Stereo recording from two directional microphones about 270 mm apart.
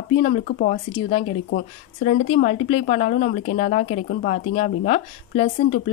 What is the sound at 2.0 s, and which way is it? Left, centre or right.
Speech, left.